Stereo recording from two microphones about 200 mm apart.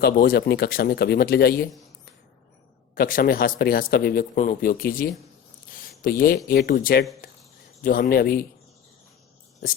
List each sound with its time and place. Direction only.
0.0 s speech: 50° left (ahead or behind)
2.9 s speech: 45° left (ahead or behind)
7.2 s a sound: 45° left (ahead or behind)
7.8 s speech: 45° left (ahead or behind)